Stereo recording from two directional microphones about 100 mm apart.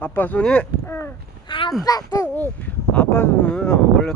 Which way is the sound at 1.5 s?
55° left (ahead or behind).